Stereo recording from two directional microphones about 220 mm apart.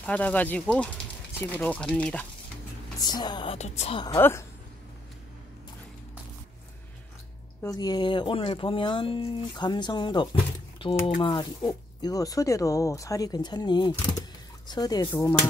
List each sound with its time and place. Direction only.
0.0 s speech: 5° left (ahead or behind)
3.0 s speech: 20° left (ahead or behind)
4.2 s speech: 10° left (ahead or behind)
7.6 s speech: 15° left (ahead or behind)